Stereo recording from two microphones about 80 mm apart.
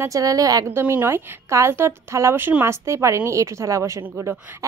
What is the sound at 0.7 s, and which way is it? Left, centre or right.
A woman's voice, right.